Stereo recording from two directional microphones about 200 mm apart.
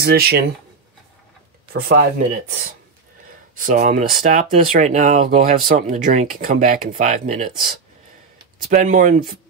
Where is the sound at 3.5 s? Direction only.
40° right (ahead or behind).